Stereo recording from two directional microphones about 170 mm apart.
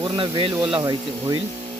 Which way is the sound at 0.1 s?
30° right (ahead or behind).